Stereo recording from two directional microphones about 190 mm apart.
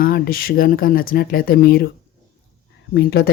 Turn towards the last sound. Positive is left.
turn(degrees=55)  # may be behind; listen again after turning